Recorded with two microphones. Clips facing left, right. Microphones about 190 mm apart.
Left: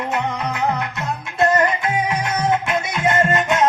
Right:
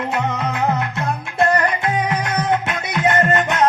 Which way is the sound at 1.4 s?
20° left (ahead or behind).